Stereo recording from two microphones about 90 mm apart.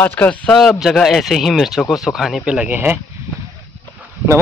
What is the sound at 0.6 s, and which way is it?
Speech, centre (ahead or behind).